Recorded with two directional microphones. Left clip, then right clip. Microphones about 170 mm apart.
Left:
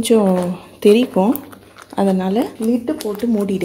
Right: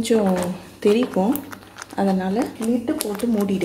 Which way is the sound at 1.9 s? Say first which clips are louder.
Left 4 dB; 45° left (ahead or behind).